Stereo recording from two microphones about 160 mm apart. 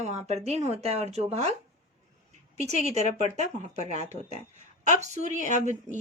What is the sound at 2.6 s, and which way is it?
Speech, 45° right (ahead or behind).